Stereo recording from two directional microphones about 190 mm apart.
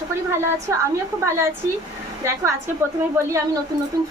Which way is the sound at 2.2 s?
15° right (ahead or behind).